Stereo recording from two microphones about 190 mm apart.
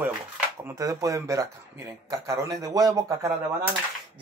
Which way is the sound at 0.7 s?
15° right (ahead or behind).